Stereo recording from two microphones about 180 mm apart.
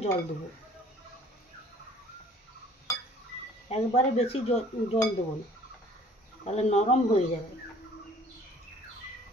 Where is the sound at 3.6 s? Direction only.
35° left (ahead or behind).